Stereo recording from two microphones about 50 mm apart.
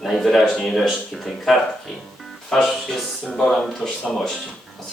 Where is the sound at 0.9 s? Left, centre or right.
Centre.